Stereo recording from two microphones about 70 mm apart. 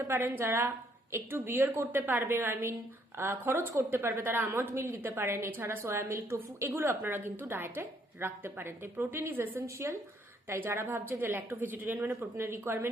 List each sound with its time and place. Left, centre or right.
0.1 s a woman's voice: right
10.5 s a woman's voice: right